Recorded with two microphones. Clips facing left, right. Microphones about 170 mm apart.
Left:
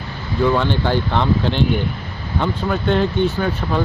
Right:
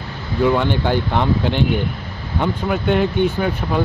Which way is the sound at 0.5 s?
15° right (ahead or behind).